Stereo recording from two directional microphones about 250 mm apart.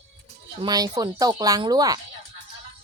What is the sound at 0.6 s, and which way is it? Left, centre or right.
Speech, centre.